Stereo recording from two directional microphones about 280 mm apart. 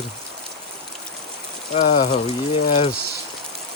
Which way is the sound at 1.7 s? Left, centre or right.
Left.